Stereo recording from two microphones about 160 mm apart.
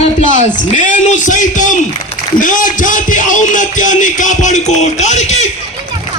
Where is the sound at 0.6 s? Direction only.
50° left (ahead or behind).